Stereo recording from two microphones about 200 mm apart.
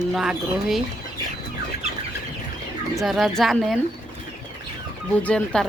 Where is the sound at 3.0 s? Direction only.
Centre (ahead or behind).